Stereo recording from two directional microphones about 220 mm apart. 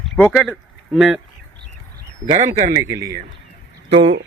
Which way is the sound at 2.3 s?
30° right (ahead or behind).